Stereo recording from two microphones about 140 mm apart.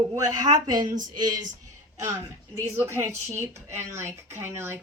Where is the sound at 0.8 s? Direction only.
70° right (ahead or behind).